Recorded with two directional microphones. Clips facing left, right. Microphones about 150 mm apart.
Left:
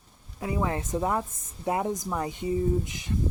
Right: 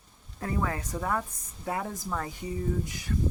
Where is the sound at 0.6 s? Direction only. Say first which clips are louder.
Left 8 dB; 25° left (ahead or behind).